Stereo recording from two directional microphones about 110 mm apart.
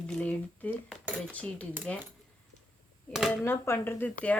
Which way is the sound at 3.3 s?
20° left (ahead or behind).